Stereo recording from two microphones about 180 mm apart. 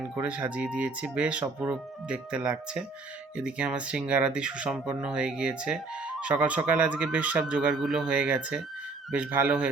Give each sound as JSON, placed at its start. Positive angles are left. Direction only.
{"t": 0.2, "sound": "speech", "side_deg": -10}